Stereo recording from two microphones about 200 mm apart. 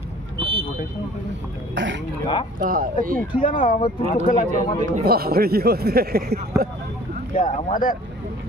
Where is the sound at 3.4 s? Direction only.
40° left (ahead or behind).